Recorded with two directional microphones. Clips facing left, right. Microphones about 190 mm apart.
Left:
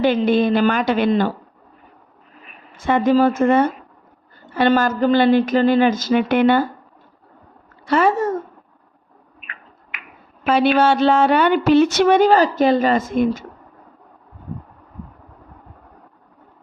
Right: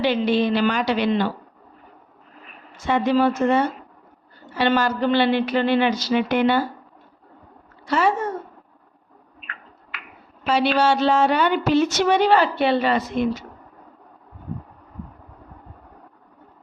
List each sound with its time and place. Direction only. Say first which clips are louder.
0.0 s a woman's voice: left 4 dB; 50° left (ahead or behind)
2.7 s a woman's voice: left 4 dB; 55° left (ahead or behind)
7.9 s speech: left 4 dB; 55° left (ahead or behind)
9.4 s a sound: even; 15° left (ahead or behind)
10.4 s a woman's voice: left 4 dB; 55° left (ahead or behind)